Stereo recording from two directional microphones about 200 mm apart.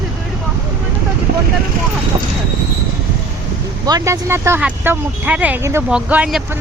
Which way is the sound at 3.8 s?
15° right (ahead or behind).